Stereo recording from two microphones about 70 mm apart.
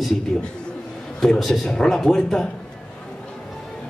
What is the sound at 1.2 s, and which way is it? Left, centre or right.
A man's voice, centre.